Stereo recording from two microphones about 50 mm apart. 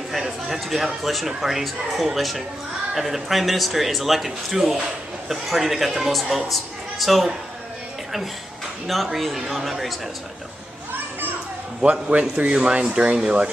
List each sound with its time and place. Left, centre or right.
0.1 s speech: centre
8.8 s speech: centre
10.9 s children playing: right
11.8 s speech: right